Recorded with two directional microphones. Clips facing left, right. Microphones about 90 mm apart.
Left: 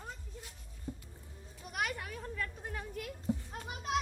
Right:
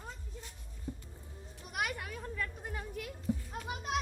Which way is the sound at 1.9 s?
20° right (ahead or behind).